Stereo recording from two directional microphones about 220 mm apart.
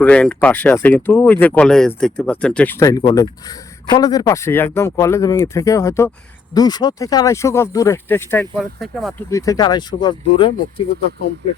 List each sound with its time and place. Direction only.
0.0 s speech: 5° left (ahead or behind)
9.3 s speech: 15° left (ahead or behind)